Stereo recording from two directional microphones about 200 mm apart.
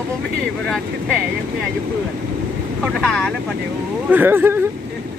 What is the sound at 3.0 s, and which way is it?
Speech, 5° left (ahead or behind).